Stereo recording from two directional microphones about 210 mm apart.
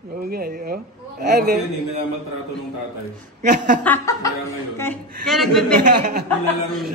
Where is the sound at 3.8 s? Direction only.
10° left (ahead or behind).